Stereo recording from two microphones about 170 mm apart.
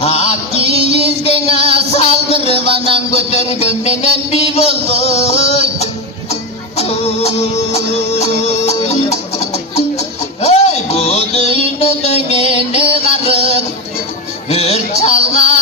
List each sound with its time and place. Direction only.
0.0 s music: 40° left (ahead or behind)